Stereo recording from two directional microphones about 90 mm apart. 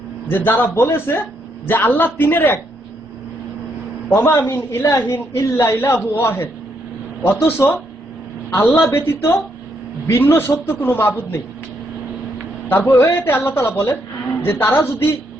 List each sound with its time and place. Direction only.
0.3 s a woman's voice: 25° left (ahead or behind)
4.1 s a man's voice: 30° left (ahead or behind)
12.6 s a woman's voice: 20° left (ahead or behind)